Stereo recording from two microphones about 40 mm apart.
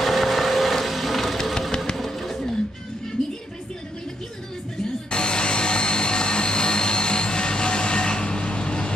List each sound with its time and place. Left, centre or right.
0.0 s vehicle: centre
2.0 s music: centre
5.1 s a sound: left